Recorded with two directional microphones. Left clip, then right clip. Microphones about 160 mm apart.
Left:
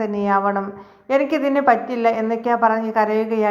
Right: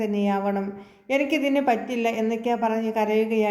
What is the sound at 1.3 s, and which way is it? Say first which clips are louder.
A woman's voice: left 6 dB; 40° left (ahead or behind).